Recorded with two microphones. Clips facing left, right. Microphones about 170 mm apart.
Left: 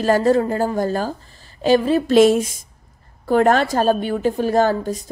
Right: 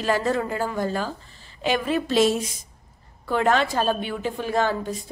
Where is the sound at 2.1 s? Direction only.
55° left (ahead or behind).